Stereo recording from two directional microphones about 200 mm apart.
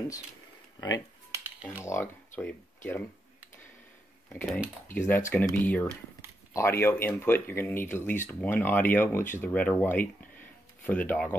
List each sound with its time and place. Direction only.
0.7 s speech: 20° left (ahead or behind)
4.9 s speech: 10° left (ahead or behind)